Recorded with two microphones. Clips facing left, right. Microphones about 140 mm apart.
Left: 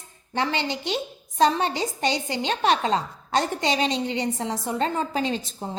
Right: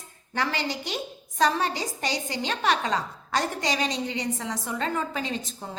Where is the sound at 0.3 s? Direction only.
25° left (ahead or behind).